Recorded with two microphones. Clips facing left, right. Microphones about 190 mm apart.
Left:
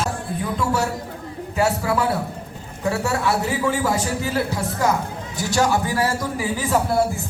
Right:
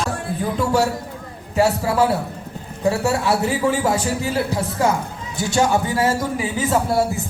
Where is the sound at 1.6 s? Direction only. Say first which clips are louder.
Right 3 dB; 30° right (ahead or behind).